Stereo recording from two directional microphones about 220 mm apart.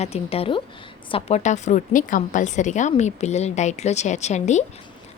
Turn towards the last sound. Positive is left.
turn(degrees=30)  # may be behind; listen again after turning